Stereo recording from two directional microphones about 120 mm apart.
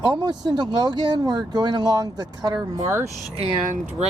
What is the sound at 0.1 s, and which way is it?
Speech, 35° right (ahead or behind).